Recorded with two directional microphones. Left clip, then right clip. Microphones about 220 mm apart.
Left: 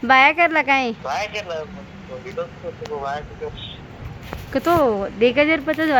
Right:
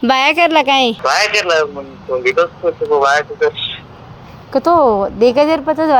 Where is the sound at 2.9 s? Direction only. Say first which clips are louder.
Right 15 dB; 50° right (ahead or behind).